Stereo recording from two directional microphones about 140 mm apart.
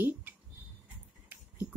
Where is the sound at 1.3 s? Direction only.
15° right (ahead or behind).